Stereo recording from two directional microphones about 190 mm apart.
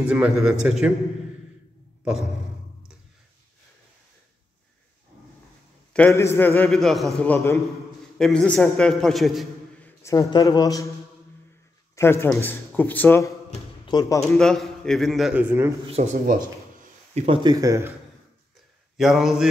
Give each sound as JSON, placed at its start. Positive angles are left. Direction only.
{"t": 0.0, "sound": "a man's voice", "side_deg": -5}
{"t": 5.9, "sound": "a man's voice", "side_deg": 10}
{"t": 10.1, "sound": "a man's voice", "side_deg": 20}
{"t": 11.9, "sound": "a man's voice", "side_deg": 15}
{"t": 13.5, "sound": "a sound", "side_deg": 25}
{"t": 14.3, "sound": "a man's voice", "side_deg": 0}
{"t": 15.9, "sound": "speech", "side_deg": -35}
{"t": 17.1, "sound": "speech", "side_deg": -25}
{"t": 18.9, "sound": "a man's voice", "side_deg": 0}